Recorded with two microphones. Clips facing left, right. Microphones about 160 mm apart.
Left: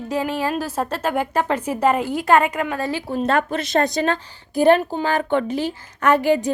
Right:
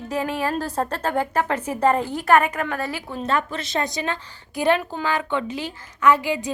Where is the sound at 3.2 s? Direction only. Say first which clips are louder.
Left 3 dB; 55° left (ahead or behind).